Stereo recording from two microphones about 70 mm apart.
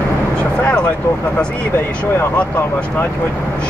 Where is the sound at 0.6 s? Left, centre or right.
Centre.